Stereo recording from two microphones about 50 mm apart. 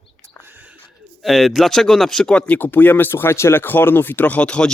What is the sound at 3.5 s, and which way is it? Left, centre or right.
Speech, left.